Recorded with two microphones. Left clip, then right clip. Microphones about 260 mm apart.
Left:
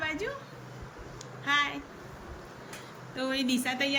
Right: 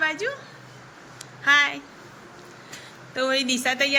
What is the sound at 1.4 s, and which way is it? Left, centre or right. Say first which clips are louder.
Speech: right 9 dB; centre.